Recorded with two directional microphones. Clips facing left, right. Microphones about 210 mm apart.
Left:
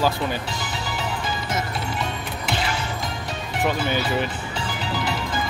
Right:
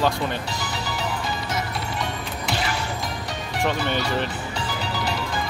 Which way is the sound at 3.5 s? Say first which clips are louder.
Left 1 dB; 5° left (ahead or behind).